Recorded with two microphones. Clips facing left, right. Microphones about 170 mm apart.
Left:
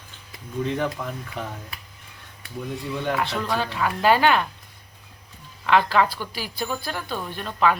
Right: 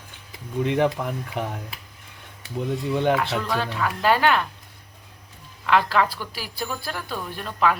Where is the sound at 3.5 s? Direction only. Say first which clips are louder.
Even; centre (ahead or behind).